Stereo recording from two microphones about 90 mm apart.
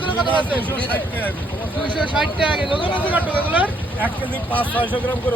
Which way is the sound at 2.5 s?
70° left (ahead or behind).